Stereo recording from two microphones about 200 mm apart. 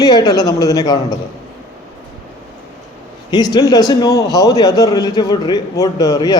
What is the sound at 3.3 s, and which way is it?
Speech, 20° left (ahead or behind).